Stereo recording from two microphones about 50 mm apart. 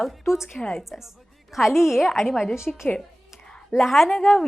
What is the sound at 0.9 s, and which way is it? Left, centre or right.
A woman's voice, centre.